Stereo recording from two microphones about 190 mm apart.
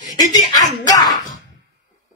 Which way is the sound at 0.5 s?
20° left (ahead or behind).